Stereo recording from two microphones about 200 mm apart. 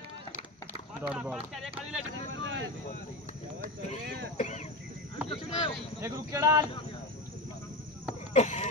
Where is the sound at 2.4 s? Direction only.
70° right (ahead or behind).